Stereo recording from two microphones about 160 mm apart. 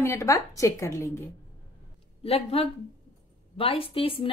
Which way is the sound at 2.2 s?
40° left (ahead or behind).